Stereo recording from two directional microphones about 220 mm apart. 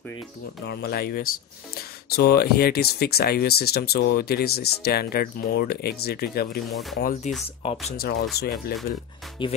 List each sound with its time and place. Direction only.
0.7 s speech: 45° left (ahead or behind)
7.2 s speech: 35° left (ahead or behind)
8.0 s speech: 50° left (ahead or behind)
9.4 s speech: 20° left (ahead or behind)